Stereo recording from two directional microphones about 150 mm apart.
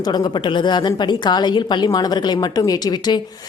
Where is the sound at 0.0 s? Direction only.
30° left (ahead or behind).